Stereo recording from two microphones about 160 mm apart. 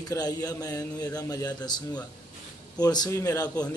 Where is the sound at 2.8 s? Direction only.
25° left (ahead or behind).